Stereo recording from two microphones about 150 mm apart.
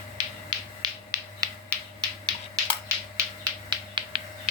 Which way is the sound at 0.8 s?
25° right (ahead or behind).